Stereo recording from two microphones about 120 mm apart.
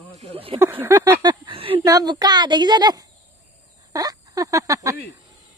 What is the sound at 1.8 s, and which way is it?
A woman's voice, 35° right (ahead or behind).